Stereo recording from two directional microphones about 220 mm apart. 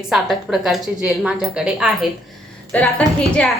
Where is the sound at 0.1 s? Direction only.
Centre (ahead or behind).